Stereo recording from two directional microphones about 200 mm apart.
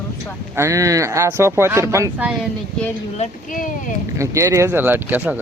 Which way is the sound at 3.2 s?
40° left (ahead or behind).